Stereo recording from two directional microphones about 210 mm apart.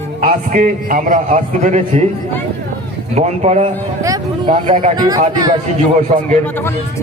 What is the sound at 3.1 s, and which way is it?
Speech, 30° right (ahead or behind).